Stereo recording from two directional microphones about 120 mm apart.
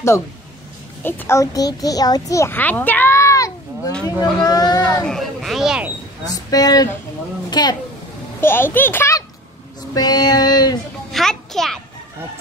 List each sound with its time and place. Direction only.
1.0 s a child's voice: 20° left (ahead or behind)
2.5 s a sound: 15° left (ahead or behind)
4.2 s a child's voice: 30° left (ahead or behind)
5.0 s speech: centre (ahead or behind)
6.2 s a child's voice: 35° left (ahead or behind)
8.4 s a child's voice: 20° left (ahead or behind)
9.9 s a child's voice: 35° left (ahead or behind)
11.1 s a sound: 5° left (ahead or behind)